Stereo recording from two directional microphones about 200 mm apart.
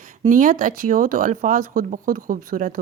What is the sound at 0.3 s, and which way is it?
Speech, 40° right (ahead or behind).